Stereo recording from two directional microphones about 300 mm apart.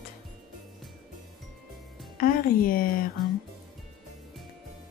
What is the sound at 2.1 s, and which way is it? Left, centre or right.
Speech, left.